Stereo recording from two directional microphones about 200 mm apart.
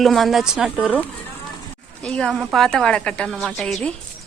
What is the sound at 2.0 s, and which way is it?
A woman's voice, 5° left (ahead or behind).